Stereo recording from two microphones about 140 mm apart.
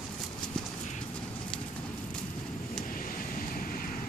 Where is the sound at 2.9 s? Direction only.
85° left.